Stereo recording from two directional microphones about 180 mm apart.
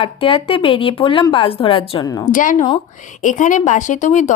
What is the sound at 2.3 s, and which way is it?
Speech, 45° left (ahead or behind).